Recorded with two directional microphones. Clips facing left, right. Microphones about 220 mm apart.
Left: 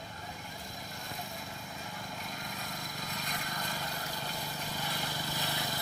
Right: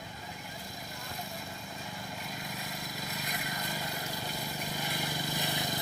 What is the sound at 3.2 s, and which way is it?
Vehicle, 10° right (ahead or behind).